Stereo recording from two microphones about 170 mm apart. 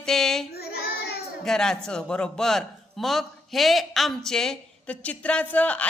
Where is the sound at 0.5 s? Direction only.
70° left (ahead or behind).